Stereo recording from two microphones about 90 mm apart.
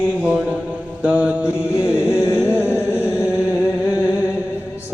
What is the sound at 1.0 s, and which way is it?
Mantra, 15° right (ahead or behind).